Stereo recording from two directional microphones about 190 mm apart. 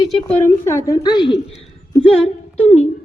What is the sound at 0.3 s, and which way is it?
A woman's voice, 10° left (ahead or behind).